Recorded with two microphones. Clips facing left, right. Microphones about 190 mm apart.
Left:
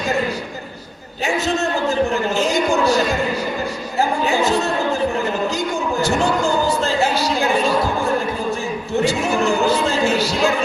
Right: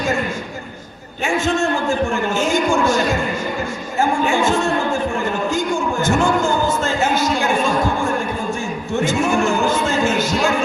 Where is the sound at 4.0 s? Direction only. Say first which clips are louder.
Right 1 dB; 40° left (ahead or behind).